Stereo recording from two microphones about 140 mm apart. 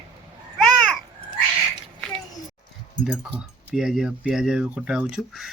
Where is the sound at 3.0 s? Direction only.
5° right (ahead or behind).